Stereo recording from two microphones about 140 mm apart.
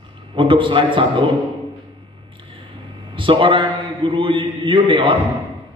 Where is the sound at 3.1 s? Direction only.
35° right (ahead or behind).